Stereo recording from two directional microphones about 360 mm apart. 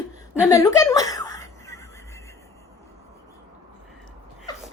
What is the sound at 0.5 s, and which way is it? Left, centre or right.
Giggle, centre.